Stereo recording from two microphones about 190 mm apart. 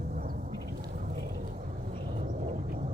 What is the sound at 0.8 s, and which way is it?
Vehicle, 50° right (ahead or behind).